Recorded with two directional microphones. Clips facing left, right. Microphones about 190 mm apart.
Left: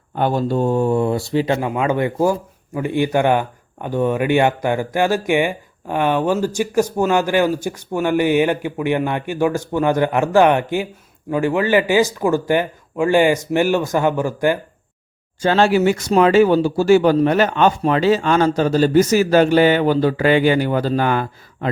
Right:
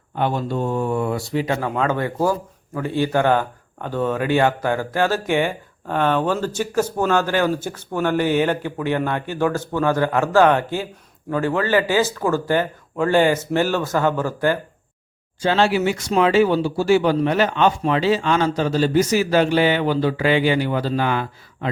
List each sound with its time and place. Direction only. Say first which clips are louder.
0.2 s speech: left 4 dB; 40° left (ahead or behind)
1.6 s speech: left 3 dB; 15° left (ahead or behind)
15.4 s speech: left 3 dB; 45° left (ahead or behind)